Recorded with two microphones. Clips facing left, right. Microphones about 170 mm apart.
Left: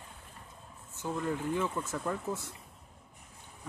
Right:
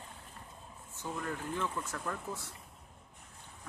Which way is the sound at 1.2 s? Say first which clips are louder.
Left 5 dB; 15° left (ahead or behind).